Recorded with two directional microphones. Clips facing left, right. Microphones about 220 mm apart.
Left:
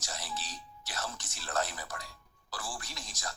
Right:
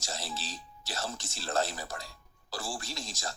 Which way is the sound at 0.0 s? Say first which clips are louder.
Right 2 dB; 30° right (ahead or behind).